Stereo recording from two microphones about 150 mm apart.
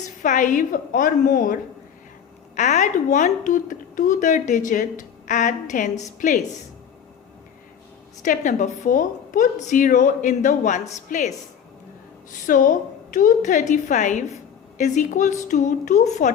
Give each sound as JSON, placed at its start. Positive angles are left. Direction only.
{"t": 0.2, "sound": "speech", "side_deg": 60}
{"t": 2.6, "sound": "speech", "side_deg": 55}
{"t": 8.2, "sound": "speech", "side_deg": 55}
{"t": 12.3, "sound": "a woman's voice", "side_deg": 60}